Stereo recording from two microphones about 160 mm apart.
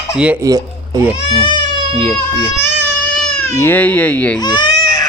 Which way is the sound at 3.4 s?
15° left (ahead or behind).